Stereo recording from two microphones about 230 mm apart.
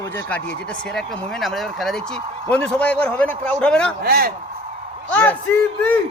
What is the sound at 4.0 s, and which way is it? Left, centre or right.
Speech, right.